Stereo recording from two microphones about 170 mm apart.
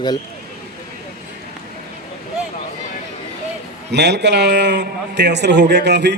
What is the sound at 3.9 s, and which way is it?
A man's voice, 90° right.